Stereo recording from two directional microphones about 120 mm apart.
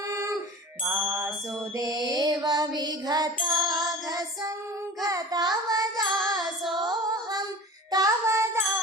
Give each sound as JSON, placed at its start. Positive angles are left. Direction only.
{"t": 0.1, "sound": "a sound", "side_deg": -25}
{"t": 1.0, "sound": "music", "side_deg": -25}
{"t": 5.0, "sound": "child singing", "side_deg": -30}
{"t": 6.4, "sound": "child singing", "side_deg": 0}
{"t": 6.8, "sound": "female singing", "side_deg": -35}
{"t": 7.9, "sound": "child singing", "side_deg": -30}